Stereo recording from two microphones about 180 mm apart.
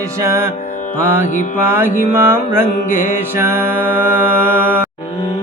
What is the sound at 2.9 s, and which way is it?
Mantra, 45° left (ahead or behind).